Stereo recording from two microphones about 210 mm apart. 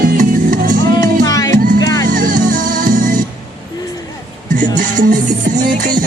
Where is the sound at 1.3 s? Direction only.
15° left (ahead or behind).